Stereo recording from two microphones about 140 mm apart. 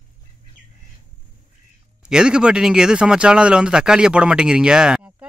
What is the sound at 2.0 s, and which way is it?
Speech, 5° right (ahead or behind).